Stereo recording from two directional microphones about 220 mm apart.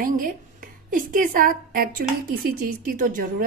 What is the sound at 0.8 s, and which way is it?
A woman's voice, 40° right (ahead or behind).